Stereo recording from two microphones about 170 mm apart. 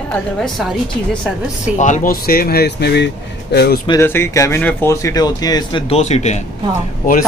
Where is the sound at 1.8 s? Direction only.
45° left (ahead or behind); by 3.8 s 70° left (ahead or behind).